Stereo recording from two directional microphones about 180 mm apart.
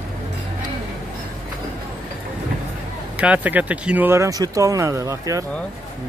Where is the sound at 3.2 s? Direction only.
10° right (ahead or behind).